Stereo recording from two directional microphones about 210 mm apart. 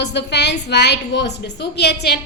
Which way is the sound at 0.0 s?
55° left (ahead or behind).